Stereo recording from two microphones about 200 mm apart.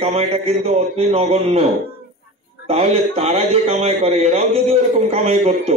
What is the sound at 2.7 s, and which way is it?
A man's voice, 30° right (ahead or behind).